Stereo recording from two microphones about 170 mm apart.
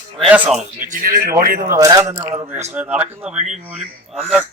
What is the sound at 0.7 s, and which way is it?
A man's voice, 50° right (ahead or behind).